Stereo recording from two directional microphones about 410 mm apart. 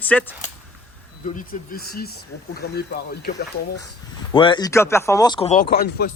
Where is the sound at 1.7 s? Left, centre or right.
Left.